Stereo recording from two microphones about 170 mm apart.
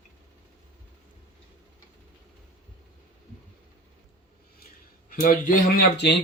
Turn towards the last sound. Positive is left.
turn(degrees=75)  # may be behind; listen again after turning